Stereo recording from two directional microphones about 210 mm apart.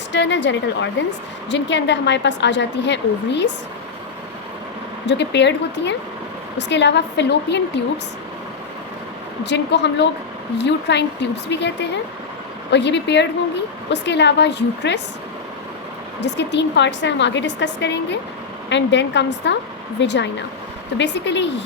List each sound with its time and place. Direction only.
0.1 s a woman's voice: 60° left (ahead or behind)
5.0 s a woman's voice: 55° left (ahead or behind)
9.4 s a woman's voice: 55° left (ahead or behind)
16.2 s a woman's voice: 55° left (ahead or behind)